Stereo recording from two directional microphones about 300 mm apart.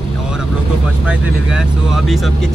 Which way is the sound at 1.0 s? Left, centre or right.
Centre.